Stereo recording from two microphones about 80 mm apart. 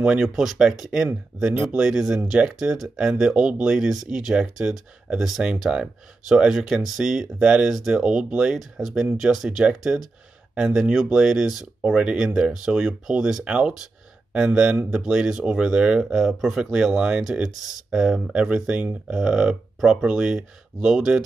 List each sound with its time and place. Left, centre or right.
0.0 s speech: centre